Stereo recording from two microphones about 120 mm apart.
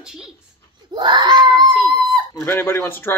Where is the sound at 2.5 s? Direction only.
20° left (ahead or behind).